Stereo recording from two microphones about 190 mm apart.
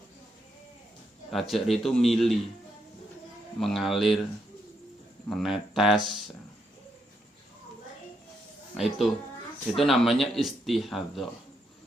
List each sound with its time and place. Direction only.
1.3 s speech: centre (ahead or behind)
3.6 s speech: centre (ahead or behind)
5.3 s speech: centre (ahead or behind)
8.7 s speech: centre (ahead or behind)